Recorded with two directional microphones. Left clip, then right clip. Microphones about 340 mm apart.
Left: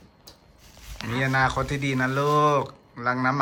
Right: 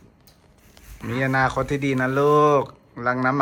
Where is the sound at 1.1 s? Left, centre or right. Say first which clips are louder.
Right 2 dB; centre.